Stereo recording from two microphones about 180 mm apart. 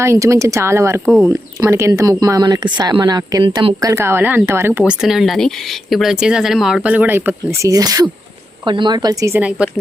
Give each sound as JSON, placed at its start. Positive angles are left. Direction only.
{"t": 0.0, "sound": "speech", "side_deg": -15}
{"t": 4.8, "sound": "speech", "side_deg": -5}